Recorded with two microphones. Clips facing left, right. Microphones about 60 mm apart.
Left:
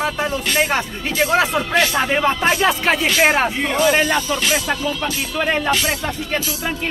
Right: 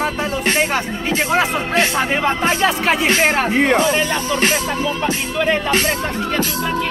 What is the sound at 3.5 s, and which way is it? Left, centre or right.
Speech, right.